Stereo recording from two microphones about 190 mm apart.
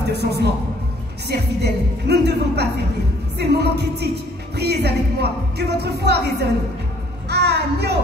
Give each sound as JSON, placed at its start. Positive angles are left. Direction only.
{"t": 0.1, "sound": "speech", "side_deg": -60}